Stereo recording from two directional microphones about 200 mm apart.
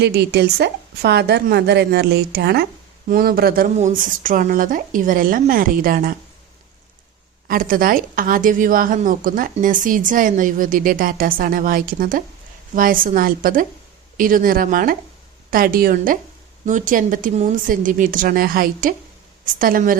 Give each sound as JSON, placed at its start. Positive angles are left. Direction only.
{"t": 0.0, "sound": "a woman's voice", "side_deg": -55}
{"t": 7.4, "sound": "a woman's voice", "side_deg": -45}